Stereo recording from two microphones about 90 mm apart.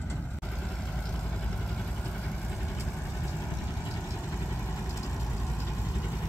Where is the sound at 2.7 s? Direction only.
30° left (ahead or behind).